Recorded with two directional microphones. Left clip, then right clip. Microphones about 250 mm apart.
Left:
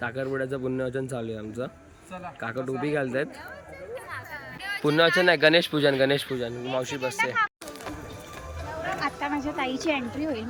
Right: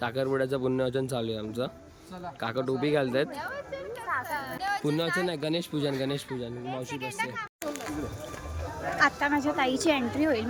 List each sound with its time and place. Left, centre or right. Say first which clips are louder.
0.0 s speech: right 1 dB; centre
4.4 s a sound: right 2 dB; right
4.9 s speech: left 13 dB; centre
9.0 s speech: right 8 dB; centre